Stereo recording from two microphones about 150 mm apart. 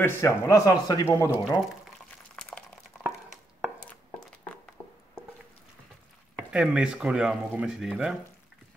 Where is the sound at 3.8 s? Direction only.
10° left (ahead or behind).